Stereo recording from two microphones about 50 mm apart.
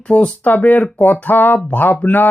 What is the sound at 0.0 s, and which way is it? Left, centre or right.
Speech, left.